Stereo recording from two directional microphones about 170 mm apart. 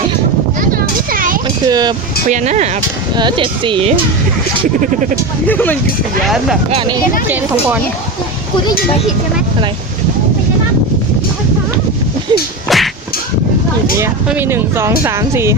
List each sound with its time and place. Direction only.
0.7 s a sound: 55° right (ahead or behind)
1.6 s speech: 25° right (ahead or behind)
2.3 s speech: 45° right (ahead or behind)
3.2 s speech: 30° right (ahead or behind)
5.5 s speech: 10° left (ahead or behind)
6.2 s speech: centre (ahead or behind)
12.3 s whack: 25° right (ahead or behind)
12.6 s a sound: centre (ahead or behind)
14.3 s speech: 15° right (ahead or behind)